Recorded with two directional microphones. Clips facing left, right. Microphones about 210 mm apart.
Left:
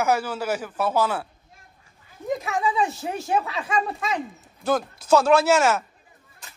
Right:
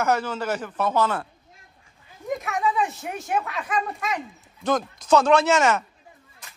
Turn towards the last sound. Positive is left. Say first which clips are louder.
# left 1 dB
turn(degrees=5)  # may be behind; listen again after turning